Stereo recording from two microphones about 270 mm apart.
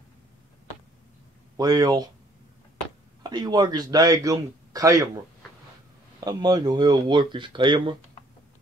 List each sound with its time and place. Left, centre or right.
1.6 s a man's voice: centre
3.3 s a man's voice: centre
6.2 s a man's voice: centre